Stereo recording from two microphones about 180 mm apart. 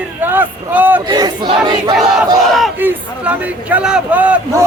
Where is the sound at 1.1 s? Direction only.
25° right (ahead or behind).